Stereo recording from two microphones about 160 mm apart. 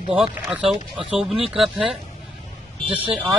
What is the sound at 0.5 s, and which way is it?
Speech, 5° right (ahead or behind).